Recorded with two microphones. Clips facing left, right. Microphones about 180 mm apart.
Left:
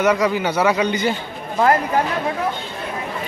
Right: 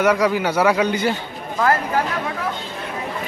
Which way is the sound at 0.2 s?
10° right (ahead or behind).